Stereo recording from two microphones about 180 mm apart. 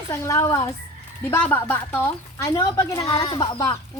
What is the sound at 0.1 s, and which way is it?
A woman's voice, 15° left (ahead or behind).